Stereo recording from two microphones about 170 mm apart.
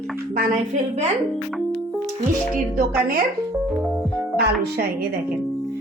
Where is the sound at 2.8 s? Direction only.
55° right (ahead or behind).